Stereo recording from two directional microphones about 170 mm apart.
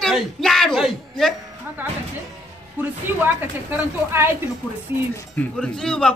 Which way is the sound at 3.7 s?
15° right (ahead or behind).